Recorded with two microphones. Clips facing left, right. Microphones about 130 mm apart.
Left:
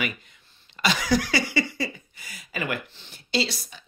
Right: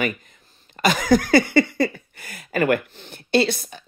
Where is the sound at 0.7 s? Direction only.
45° right (ahead or behind).